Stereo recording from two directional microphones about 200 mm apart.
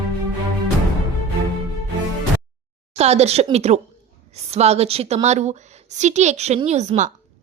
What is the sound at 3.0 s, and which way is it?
A woman's voice, 30° right (ahead or behind).